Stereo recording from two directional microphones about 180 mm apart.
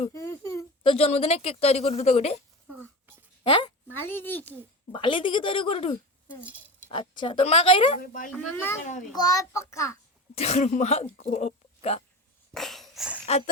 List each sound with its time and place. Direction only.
0.1 s baby cry: 15° left (ahead or behind)
0.8 s speech: 30° left (ahead or behind)
3.4 s a woman's voice: 25° left (ahead or behind)
3.9 s a child's voice: 10° left (ahead or behind)
4.9 s speech: 25° left (ahead or behind)
7.9 s speech: 50° left (ahead or behind)
8.4 s a child's voice: 10° left (ahead or behind)
8.8 s speech: 45° left (ahead or behind)
9.1 s a child's voice: 20° left (ahead or behind)
10.3 s speech: 35° left (ahead or behind)
12.5 s dog: centre (ahead or behind)
13.2 s speech: 35° left (ahead or behind)